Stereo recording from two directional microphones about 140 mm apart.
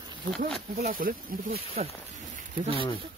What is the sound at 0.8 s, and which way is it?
Speech, 90° right.